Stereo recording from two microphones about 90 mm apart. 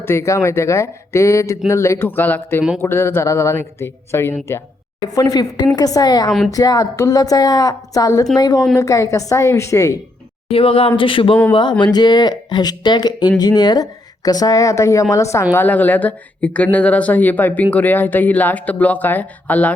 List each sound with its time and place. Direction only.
0.0 s speech: 30° left (ahead or behind)
5.1 s speech: 45° left (ahead or behind)
10.5 s speech: 90° left; by 11.3 s 75° left (ahead or behind)
11.8 s speech: 50° left (ahead or behind); by 15.4 s 35° left (ahead or behind)
15.5 s speech: 20° left (ahead or behind)